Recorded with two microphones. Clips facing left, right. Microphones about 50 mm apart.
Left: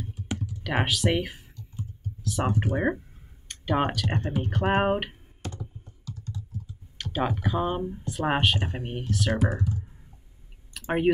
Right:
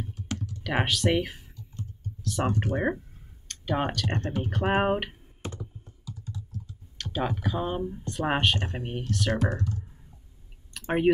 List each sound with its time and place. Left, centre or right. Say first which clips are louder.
0.4 s computer keyboard: even; centre
3.4 s speech: left 3 dB; centre
5.4 s computer keyboard: even; right
6.0 s computer keyboard: left 1 dB; centre
7.0 s speech: left 2 dB; centre
10.7 s a sound: even; centre